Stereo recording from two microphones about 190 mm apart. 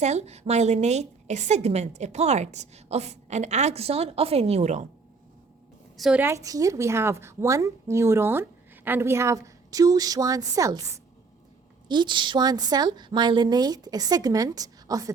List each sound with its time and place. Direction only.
0.0 s a woman's voice: 35° right (ahead or behind)
6.0 s a woman's voice: 5° right (ahead or behind)